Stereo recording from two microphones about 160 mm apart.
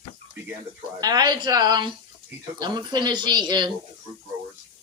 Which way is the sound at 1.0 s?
25° right (ahead or behind).